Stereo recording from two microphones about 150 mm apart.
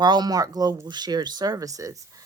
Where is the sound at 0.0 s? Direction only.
30° right (ahead or behind).